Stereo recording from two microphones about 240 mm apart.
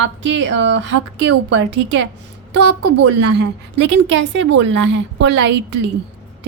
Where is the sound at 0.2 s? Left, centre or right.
Right.